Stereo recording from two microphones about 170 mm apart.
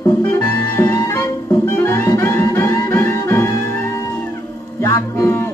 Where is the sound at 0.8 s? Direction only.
15° left (ahead or behind).